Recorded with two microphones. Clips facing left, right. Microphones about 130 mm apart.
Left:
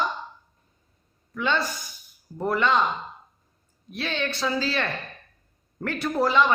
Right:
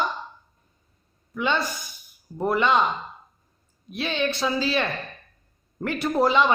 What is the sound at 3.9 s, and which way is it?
A man's voice, 15° right (ahead or behind).